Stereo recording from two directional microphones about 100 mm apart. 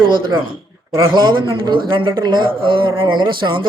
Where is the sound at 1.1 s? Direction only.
50° right (ahead or behind).